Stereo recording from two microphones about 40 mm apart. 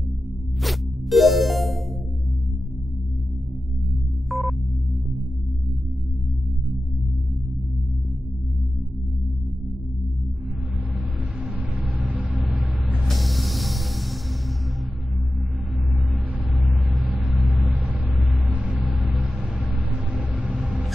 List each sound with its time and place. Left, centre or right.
0.6 s zipper: centre
4.3 s sonar: centre
12.4 s vehicle: centre
17.4 s vehicle: centre
18.5 s vehicle: right
18.8 s vehicle: centre
20.2 s vehicle: right